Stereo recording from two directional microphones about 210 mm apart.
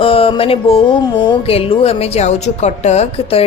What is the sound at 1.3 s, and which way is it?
A woman's voice, 25° left (ahead or behind).